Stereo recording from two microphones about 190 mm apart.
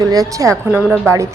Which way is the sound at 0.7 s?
5° right (ahead or behind).